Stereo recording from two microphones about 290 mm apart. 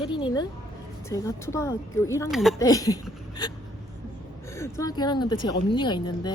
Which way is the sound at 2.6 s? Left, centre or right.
Centre.